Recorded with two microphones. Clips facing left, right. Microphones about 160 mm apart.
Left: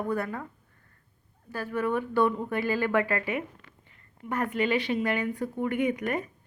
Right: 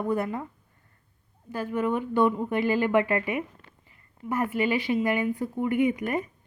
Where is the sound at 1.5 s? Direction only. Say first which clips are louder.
Right 2 dB; 15° right (ahead or behind).